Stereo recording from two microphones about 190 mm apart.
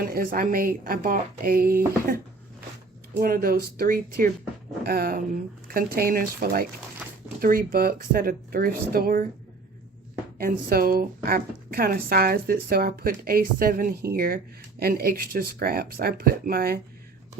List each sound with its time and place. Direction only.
0.0 s a woman's voice: 50° right (ahead or behind)
3.2 s a woman's voice: 50° right (ahead or behind)
7.0 s a sound: 5° right (ahead or behind)
7.4 s a woman's voice: 50° right (ahead or behind)
10.3 s a woman's voice: 50° right (ahead or behind)